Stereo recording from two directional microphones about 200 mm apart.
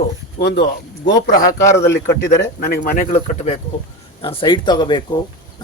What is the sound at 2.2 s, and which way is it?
Speech, 50° left (ahead or behind).